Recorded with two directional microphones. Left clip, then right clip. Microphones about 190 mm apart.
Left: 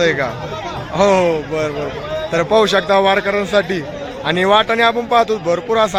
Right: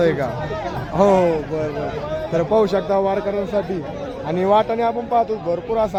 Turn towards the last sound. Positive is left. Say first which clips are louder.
# left 5 dB
turn(degrees=5)  # may be behind; listen again after turning